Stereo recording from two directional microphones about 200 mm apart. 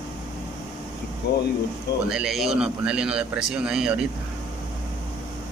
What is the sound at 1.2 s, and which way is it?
Speech, 55° left (ahead or behind).